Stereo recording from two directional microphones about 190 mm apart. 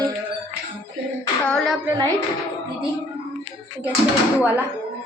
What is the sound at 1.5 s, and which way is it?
Speech, 5° left (ahead or behind).